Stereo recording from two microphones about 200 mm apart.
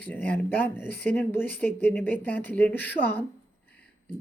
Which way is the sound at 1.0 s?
5° left (ahead or behind).